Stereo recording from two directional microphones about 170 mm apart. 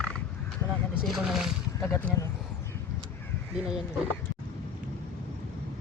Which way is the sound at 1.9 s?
15° left (ahead or behind).